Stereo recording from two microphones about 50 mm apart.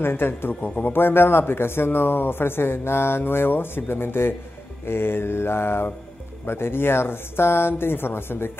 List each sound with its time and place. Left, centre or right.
0.0 s a man's voice: left